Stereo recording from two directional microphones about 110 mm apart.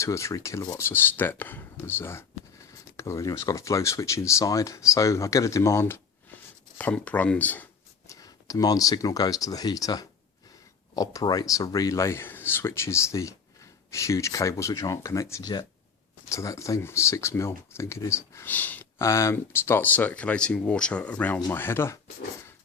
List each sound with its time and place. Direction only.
0.0 s speech: 25° left (ahead or behind)
6.7 s speech: 15° left (ahead or behind)
8.0 s speech: 30° left (ahead or behind)